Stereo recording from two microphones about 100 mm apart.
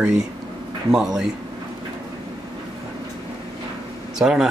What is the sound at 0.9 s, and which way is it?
Speech, 5° right (ahead or behind).